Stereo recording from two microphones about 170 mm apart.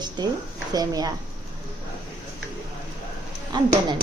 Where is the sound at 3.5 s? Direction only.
25° right (ahead or behind).